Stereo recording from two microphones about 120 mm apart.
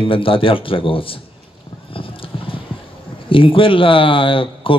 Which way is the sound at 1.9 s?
50° left (ahead or behind).